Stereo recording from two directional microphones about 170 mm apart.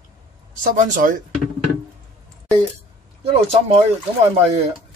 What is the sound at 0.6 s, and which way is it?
Speech, 50° right (ahead or behind).